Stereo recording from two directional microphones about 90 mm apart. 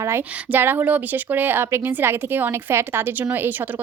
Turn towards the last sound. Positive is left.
turn(degrees=-25)  # may be behind; listen again after turning